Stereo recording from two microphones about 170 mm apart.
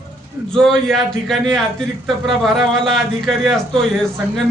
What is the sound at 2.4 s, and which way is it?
Speech, centre (ahead or behind).